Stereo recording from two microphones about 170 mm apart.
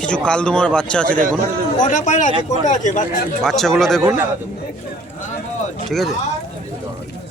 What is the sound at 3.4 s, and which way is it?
Speech, centre (ahead or behind).